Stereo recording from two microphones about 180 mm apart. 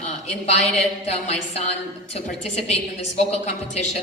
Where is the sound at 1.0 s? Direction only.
35° left (ahead or behind).